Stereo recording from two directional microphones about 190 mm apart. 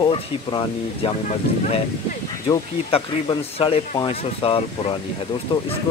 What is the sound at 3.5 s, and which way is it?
Speech, 30° left (ahead or behind).